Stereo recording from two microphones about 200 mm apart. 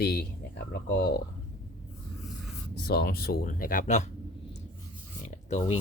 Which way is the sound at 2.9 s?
50° left (ahead or behind).